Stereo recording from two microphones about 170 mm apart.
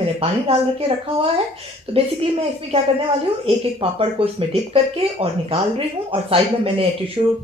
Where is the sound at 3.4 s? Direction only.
30° right (ahead or behind).